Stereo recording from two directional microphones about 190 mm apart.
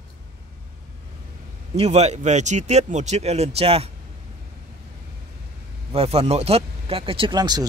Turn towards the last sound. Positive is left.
turn(degrees=-20)  # may be behind; listen again after turning